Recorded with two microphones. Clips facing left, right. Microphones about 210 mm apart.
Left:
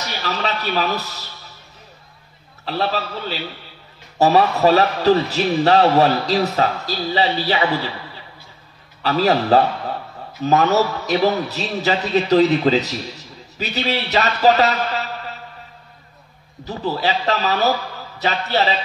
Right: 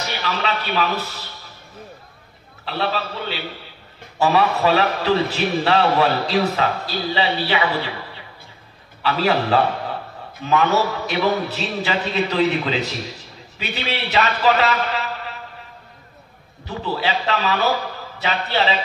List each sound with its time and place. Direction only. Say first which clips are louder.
0.2 s a man's voice: left 2 dB; 40° left (ahead or behind)
2.6 s a man's voice: left 2 dB; 40° left (ahead or behind)
9.0 s a man's voice: left 2 dB; 40° left (ahead or behind)
16.6 s a man's voice: left 2 dB; 40° left (ahead or behind)